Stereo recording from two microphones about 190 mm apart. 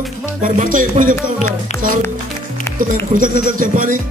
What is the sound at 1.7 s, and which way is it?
Speech, 35° left (ahead or behind).